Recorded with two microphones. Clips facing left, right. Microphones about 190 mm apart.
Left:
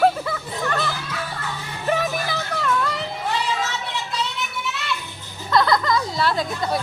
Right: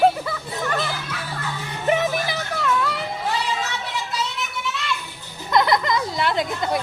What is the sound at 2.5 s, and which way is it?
Music, 5° right (ahead or behind).